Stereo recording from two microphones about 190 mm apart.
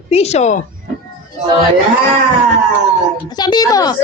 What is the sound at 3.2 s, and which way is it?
Speech, 20° left (ahead or behind).